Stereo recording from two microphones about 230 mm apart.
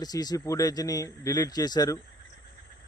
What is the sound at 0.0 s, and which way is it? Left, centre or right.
Speech, centre.